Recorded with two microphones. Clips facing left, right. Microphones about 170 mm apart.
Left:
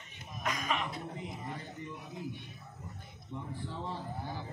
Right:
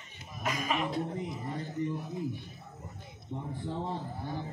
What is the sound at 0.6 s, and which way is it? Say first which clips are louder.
Speech: right 4 dB; 5° right (ahead or behind).